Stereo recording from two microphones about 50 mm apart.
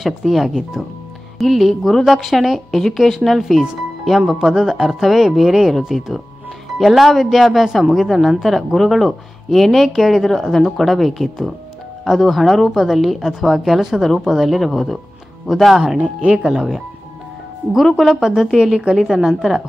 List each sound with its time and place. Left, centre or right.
0.0 s speech: centre
16.2 s speech: right
16.5 s speech: centre
17.9 s speech: centre